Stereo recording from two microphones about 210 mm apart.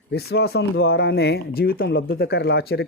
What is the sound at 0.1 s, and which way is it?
Speech, 50° left (ahead or behind).